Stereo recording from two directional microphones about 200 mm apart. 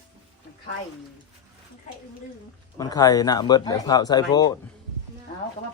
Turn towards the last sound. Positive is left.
turn(degrees=20)  # may be behind; listen again after turning